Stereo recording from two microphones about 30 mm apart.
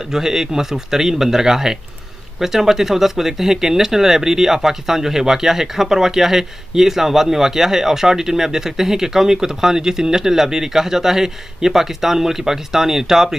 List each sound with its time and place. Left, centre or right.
0.1 s speech: centre